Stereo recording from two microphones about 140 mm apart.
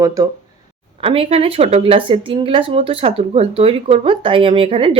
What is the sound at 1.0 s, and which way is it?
Speech, 40° right (ahead or behind).